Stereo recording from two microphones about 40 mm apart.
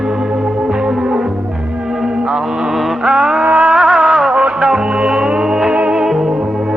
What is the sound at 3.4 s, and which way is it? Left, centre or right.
Music, right.